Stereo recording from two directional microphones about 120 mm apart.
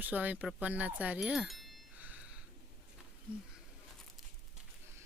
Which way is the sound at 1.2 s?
Centre (ahead or behind).